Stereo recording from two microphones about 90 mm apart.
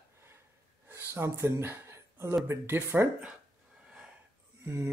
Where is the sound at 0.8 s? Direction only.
30° right (ahead or behind).